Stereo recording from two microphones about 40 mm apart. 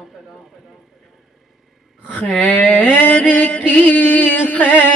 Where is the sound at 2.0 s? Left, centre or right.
Left.